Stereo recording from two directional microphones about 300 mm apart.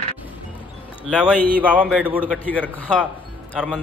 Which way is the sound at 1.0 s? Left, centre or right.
Centre.